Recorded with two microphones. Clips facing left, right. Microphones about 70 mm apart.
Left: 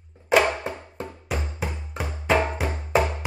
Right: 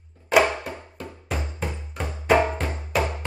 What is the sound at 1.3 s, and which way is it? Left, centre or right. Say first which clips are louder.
Music: right 1 dB; centre.